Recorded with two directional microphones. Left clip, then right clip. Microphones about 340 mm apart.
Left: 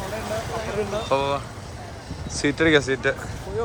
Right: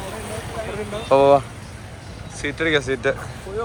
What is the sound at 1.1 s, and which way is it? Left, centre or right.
Speech, centre.